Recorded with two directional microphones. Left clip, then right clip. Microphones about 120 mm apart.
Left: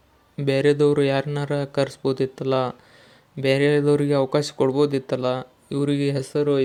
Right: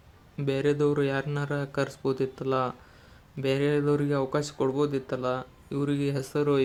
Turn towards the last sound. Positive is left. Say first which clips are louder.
# left 5 dB
turn(degrees=25)  # may be behind; listen again after turning